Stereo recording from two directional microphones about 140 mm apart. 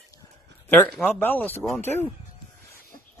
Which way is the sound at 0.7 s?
5° left (ahead or behind).